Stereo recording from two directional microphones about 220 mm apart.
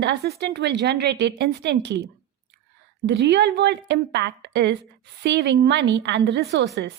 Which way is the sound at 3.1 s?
50° right (ahead or behind).